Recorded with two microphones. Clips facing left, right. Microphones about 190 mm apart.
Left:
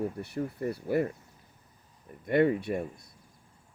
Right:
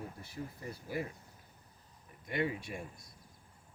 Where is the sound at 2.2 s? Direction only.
55° left (ahead or behind).